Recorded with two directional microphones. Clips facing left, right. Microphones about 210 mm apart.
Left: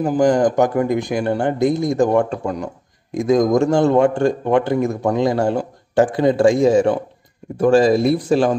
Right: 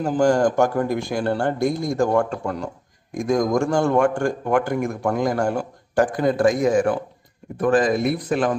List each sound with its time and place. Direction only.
0.2 s speech: 15° left (ahead or behind)